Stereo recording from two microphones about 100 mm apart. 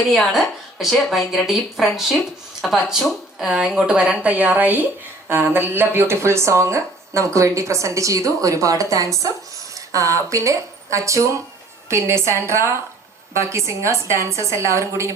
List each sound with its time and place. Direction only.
0.1 s a woman's voice: centre (ahead or behind); by 15.1 s 30° right (ahead or behind)